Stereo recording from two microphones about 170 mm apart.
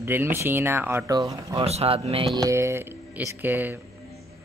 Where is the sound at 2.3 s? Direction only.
20° right (ahead or behind).